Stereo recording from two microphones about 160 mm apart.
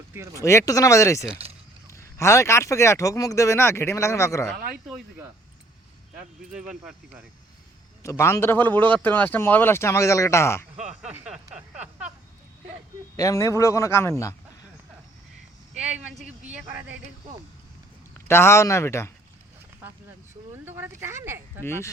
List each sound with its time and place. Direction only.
0.3 s speech: 20° left (ahead or behind)
1.4 s a sound: 35° right (ahead or behind)
1.9 s a man's voice: 15° left (ahead or behind)
4.5 s speech: 65° right (ahead or behind)
6.5 s speech: 5° right (ahead or behind)
8.0 s a man's voice: 15° left (ahead or behind)
11.0 s a sound: 10° right (ahead or behind)
13.1 s a man's voice: 20° left (ahead or behind)
15.8 s speech: 5° right (ahead or behind)
18.3 s a man's voice: 15° left (ahead or behind)
20.5 s a sound: 15° right (ahead or behind)
21.6 s a man's voice: 15° left (ahead or behind)